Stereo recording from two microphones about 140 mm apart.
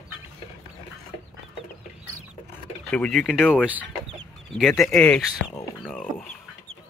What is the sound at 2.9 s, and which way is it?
Speech, 5° left (ahead or behind).